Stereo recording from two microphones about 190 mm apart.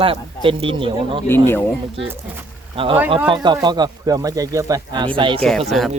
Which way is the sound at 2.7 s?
30° right (ahead or behind).